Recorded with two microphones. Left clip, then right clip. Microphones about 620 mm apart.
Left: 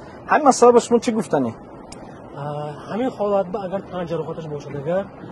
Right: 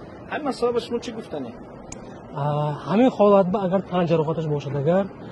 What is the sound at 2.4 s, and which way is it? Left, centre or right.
A man's voice, right.